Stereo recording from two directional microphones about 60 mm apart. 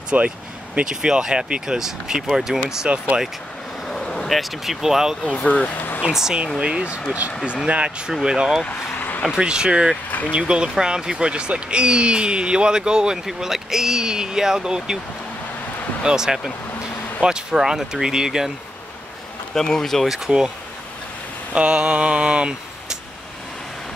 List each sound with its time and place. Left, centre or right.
0.1 s speech: right
0.7 s speech: centre
2.9 s speech: right
3.8 s speech: centre
5.2 s speech: centre
5.9 s speech: centre
8.6 s vehicle: left
9.2 s speech: centre
16.0 s speech: centre
19.5 s speech: centre
20.2 s speech: centre
21.5 s speech: centre